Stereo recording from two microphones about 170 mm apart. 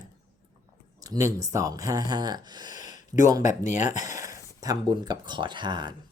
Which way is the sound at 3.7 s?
45° left (ahead or behind).